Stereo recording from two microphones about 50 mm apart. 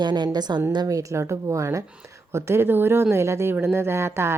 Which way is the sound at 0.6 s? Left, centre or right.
Right.